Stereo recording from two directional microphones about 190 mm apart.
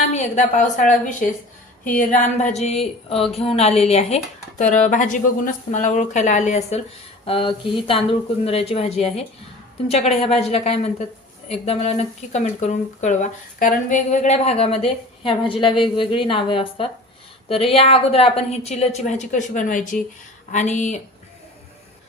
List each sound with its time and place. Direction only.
0.1 s speech: 35° left (ahead or behind)